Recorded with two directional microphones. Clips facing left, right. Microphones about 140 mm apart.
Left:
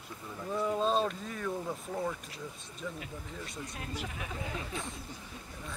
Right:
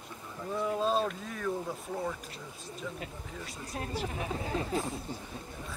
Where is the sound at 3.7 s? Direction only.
30° right (ahead or behind).